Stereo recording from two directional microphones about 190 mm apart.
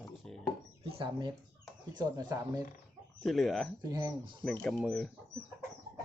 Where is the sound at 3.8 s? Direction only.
20° right (ahead or behind).